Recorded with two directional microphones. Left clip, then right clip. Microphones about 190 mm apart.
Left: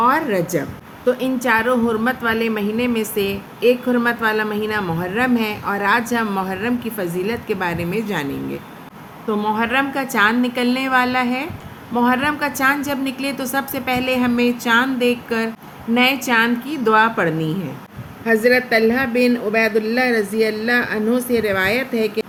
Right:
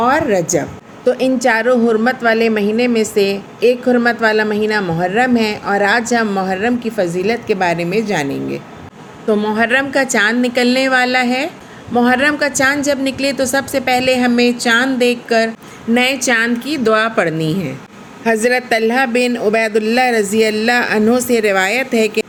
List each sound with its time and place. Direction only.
0.0 s a woman's voice: 10° right (ahead or behind)
9.4 s a woman's voice: 5° right (ahead or behind); by 22.3 s 25° right (ahead or behind)